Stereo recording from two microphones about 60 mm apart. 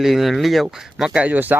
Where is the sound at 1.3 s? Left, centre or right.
Right.